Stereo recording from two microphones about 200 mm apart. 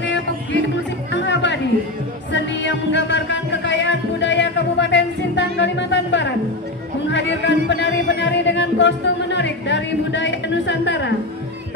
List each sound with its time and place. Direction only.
0.0 s music: 65° left (ahead or behind)